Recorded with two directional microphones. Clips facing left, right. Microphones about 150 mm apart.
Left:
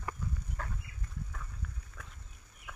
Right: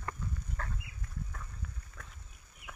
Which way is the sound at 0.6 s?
10° left (ahead or behind).